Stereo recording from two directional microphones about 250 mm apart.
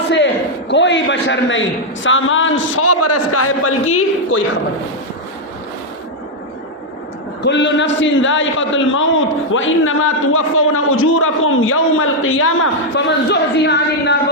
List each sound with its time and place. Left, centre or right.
0.7 s a man's voice: left
7.4 s a man's voice: left